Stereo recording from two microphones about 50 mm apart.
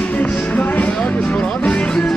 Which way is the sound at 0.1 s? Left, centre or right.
Left.